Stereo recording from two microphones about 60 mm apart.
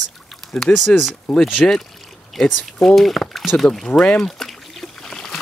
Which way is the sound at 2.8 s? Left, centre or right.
Centre.